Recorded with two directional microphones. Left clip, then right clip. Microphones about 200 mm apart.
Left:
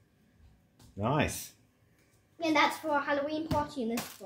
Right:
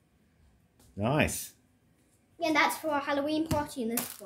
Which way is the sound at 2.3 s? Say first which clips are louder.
Right 1 dB; 45° right (ahead or behind).